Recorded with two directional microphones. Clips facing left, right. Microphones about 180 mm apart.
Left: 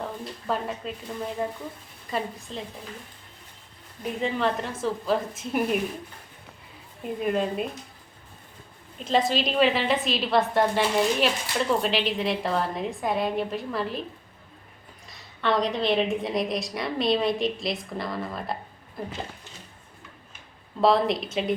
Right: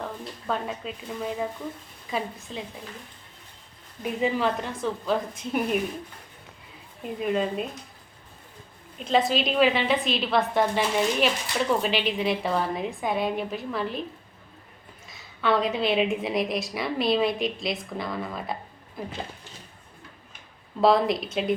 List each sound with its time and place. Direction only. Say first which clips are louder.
0.0 s a woman's voice: left 1 dB; 5° left (ahead or behind)
4.2 s a woman's voice: right 1 dB; centre (ahead or behind)
7.0 s a woman's voice: even; centre (ahead or behind)
9.0 s a woman's voice: right 1 dB; centre (ahead or behind)
15.0 s a woman's voice: right 1 dB; centre (ahead or behind)
20.8 s a woman's voice: right 1 dB; centre (ahead or behind)